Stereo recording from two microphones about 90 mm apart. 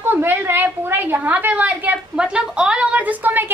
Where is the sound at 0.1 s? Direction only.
25° right (ahead or behind).